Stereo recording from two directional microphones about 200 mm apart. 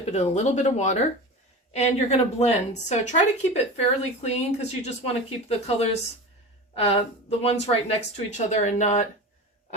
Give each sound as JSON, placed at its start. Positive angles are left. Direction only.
{"t": 0.0, "sound": "a woman's voice", "side_deg": 35}
{"t": 6.7, "sound": "a woman's voice", "side_deg": 30}